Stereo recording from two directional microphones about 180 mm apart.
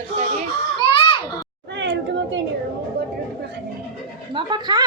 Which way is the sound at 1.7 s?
80° right.